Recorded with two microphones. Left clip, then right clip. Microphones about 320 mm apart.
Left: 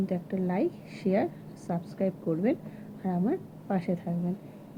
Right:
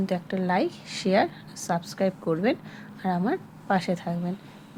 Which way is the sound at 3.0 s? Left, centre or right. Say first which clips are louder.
Right 4 dB; right.